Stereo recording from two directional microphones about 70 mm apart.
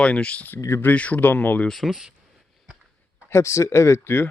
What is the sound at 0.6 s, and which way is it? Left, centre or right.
Speech, left.